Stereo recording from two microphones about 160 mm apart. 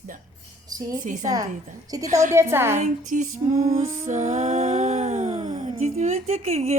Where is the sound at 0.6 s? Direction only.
25° right (ahead or behind).